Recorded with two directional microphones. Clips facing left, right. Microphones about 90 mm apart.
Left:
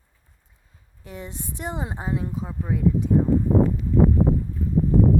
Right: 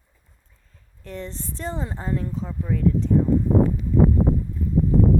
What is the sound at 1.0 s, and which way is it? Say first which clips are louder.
Speech: right 2 dB; 10° left (ahead or behind).